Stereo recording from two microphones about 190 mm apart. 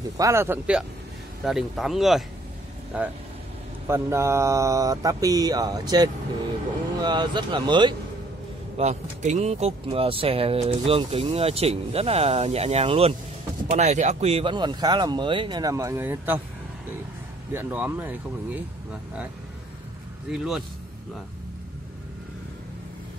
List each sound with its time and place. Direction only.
0.2 s mantra: 15° right (ahead or behind)
1.4 s speech: centre (ahead or behind)
2.9 s mantra: 5° right (ahead or behind)
7.0 s speech: 25° right (ahead or behind)
8.7 s speech: 40° right (ahead or behind); by 16.3 s 10° right (ahead or behind)
17.5 s mantra: 10° right (ahead or behind)
20.2 s speech: 5° right (ahead or behind)